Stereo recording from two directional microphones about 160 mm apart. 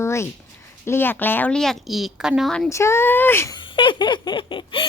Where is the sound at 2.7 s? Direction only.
15° left (ahead or behind).